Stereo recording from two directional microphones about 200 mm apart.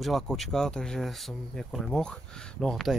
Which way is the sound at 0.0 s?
Centre (ahead or behind).